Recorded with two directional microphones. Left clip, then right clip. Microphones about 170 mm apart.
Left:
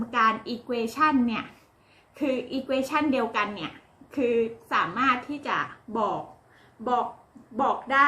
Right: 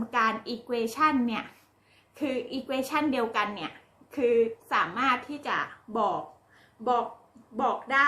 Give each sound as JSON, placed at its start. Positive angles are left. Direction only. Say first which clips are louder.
{"t": 0.1, "sound": "a woman's voice", "louder": "left 3 dB", "side_deg": -10}
{"t": 7.5, "sound": "a woman's voice", "louder": "left 2 dB", "side_deg": -10}